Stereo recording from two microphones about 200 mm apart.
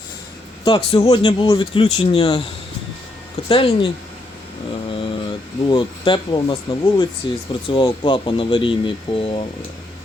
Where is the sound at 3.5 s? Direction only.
25° left (ahead or behind).